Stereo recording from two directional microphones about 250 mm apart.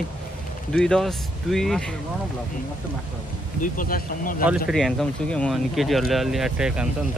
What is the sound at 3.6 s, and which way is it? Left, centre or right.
Speech, left.